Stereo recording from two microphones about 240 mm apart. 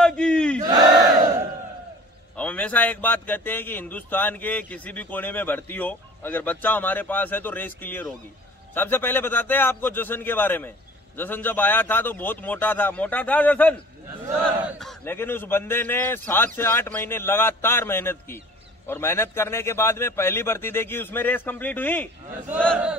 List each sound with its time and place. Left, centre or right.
0.0 s battle cry: centre
0.6 s battle cry: centre
2.3 s a man's voice: centre
14.2 s a man's voice: centre